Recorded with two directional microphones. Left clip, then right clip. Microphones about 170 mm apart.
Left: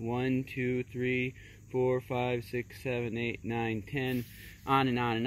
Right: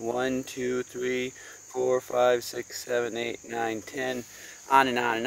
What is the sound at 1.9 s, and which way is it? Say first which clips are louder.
Speech: right 9 dB; 20° right (ahead or behind).